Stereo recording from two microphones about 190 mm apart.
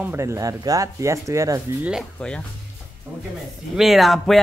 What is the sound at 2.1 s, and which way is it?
Speech, 5° left (ahead or behind).